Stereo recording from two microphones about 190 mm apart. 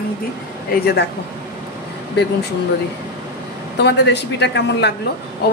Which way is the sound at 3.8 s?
65° left (ahead or behind).